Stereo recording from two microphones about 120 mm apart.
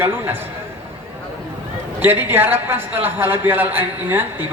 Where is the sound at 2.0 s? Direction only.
15° right (ahead or behind).